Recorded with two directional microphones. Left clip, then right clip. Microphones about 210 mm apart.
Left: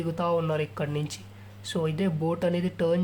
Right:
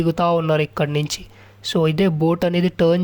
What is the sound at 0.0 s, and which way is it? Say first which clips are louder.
Speech: right 9 dB; 40° right (ahead or behind).